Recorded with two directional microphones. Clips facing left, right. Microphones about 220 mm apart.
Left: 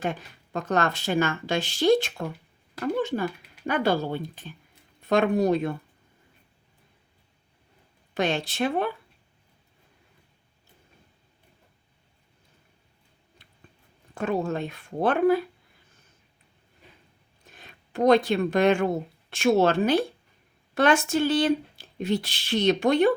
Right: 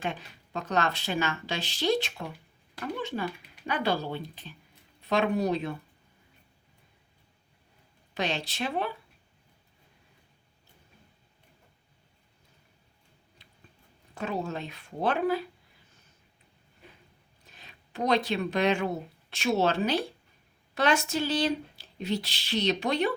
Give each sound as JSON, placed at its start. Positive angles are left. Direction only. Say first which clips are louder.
{"t": 0.0, "sound": "speech", "louder": "left 4 dB", "side_deg": 45}
{"t": 8.1, "sound": "speech", "louder": "left 6 dB", "side_deg": 50}
{"t": 13.4, "sound": "a sound", "louder": "left 1 dB", "side_deg": 50}
{"t": 14.2, "sound": "speech", "louder": "left 6 dB", "side_deg": 50}
{"t": 17.5, "sound": "speech", "louder": "left 7 dB", "side_deg": 50}